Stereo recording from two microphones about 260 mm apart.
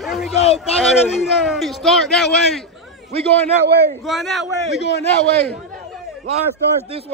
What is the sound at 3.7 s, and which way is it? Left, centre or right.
Speech, right.